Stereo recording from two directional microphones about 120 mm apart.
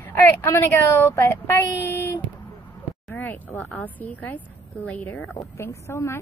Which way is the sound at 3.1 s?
15° left (ahead or behind).